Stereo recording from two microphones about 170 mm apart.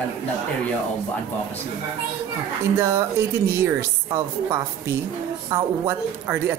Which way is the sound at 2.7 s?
15° right (ahead or behind).